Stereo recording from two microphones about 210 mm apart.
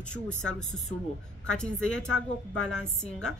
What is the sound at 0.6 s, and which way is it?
Speech, 35° left (ahead or behind).